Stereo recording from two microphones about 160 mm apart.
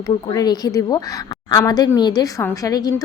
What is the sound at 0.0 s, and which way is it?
A woman's voice, 25° left (ahead or behind).